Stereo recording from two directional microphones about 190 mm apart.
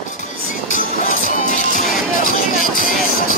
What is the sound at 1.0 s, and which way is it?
Music, 45° left (ahead or behind).